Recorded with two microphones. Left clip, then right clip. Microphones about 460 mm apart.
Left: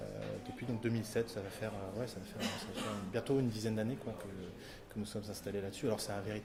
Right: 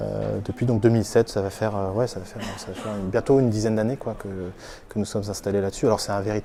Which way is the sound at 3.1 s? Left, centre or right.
Right.